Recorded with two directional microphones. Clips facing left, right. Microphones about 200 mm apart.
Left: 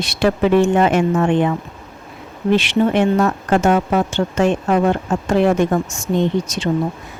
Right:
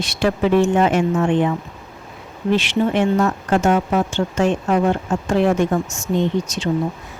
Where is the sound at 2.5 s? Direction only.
60° left (ahead or behind).